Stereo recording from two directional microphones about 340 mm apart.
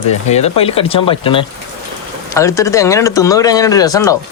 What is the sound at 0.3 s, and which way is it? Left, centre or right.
Speech, centre.